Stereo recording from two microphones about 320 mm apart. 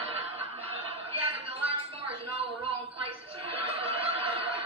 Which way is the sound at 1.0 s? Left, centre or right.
Centre.